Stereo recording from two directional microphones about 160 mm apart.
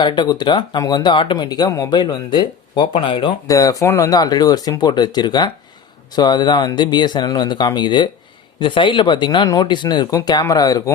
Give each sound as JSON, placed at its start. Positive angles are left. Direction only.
{"t": 0.0, "sound": "speech", "side_deg": 25}